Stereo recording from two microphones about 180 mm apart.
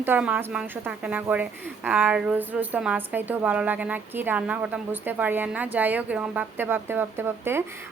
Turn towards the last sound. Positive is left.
turn(degrees=-15)  # may be behind; listen again after turning